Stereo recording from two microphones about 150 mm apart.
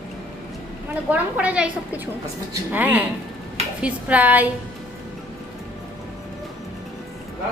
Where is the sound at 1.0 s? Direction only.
10° right (ahead or behind).